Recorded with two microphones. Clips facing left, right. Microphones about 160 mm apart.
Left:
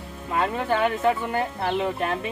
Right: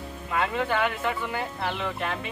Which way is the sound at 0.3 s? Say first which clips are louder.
Left 3 dB; 35° left (ahead or behind).